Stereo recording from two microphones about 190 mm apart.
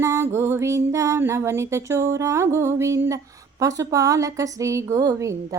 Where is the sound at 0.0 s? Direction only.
15° right (ahead or behind).